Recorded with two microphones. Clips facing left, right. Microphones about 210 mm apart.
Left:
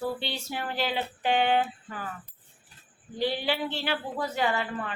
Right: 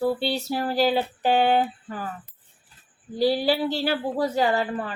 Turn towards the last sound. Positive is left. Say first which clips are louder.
# right 5 dB
turn(degrees=-35)  # may be behind; listen again after turning